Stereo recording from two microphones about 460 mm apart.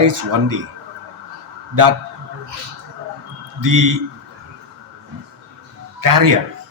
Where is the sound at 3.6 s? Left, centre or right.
Right.